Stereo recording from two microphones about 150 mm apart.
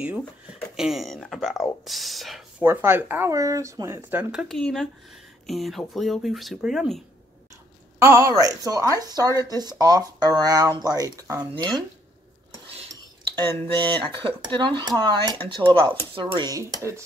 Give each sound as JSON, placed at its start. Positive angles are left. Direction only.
{"t": 0.5, "sound": "speech", "side_deg": -5}
{"t": 2.6, "sound": "speech", "side_deg": -15}
{"t": 8.0, "sound": "speech", "side_deg": -20}
{"t": 13.7, "sound": "speech", "side_deg": -30}